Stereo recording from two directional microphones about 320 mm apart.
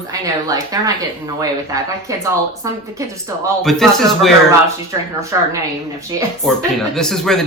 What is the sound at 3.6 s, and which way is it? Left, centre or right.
Speech, centre.